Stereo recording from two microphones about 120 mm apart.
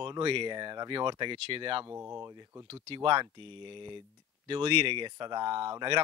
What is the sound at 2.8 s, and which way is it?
Speech, 45° right (ahead or behind).